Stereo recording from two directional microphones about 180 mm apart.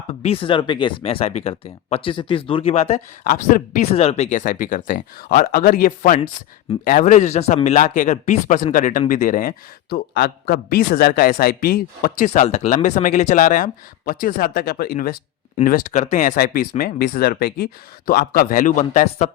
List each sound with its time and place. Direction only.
0.1 s speech: 35° left (ahead or behind)
3.9 s a man's voice: 35° left (ahead or behind)